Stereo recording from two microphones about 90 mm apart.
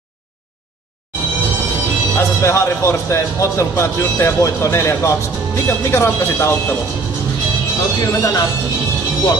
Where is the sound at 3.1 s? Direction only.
30° left (ahead or behind).